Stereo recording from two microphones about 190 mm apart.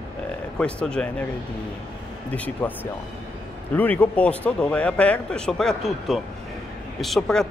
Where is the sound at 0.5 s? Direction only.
5° left (ahead or behind).